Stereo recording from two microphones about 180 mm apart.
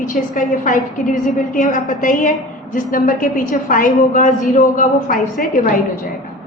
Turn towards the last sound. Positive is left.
turn(degrees=45)  # may be behind; listen again after turning